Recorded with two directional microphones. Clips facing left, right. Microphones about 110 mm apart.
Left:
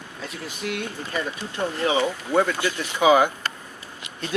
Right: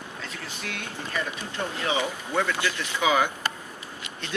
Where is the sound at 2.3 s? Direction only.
40° left (ahead or behind).